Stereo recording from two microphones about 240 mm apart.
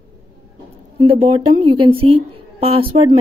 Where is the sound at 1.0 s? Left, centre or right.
Right.